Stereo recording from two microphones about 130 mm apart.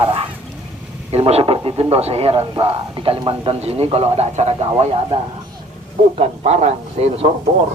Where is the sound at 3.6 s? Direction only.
50° right (ahead or behind).